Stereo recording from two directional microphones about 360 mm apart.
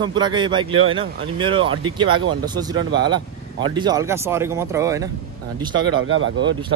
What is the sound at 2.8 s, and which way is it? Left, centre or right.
Speech, right.